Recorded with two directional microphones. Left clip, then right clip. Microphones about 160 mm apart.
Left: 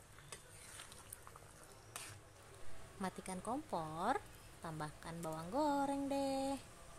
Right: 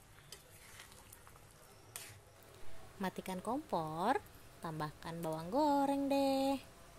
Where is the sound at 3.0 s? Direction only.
15° right (ahead or behind).